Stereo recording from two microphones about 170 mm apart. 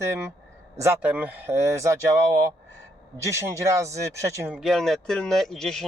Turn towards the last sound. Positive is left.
turn(degrees=0)  # may be behind; listen again after turning